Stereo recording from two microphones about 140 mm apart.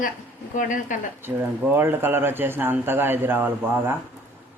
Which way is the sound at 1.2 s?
15° right (ahead or behind).